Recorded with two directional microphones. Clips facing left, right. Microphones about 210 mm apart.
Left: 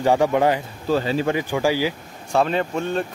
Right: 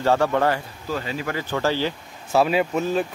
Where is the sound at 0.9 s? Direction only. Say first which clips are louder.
Left 7 dB; 30° left (ahead or behind).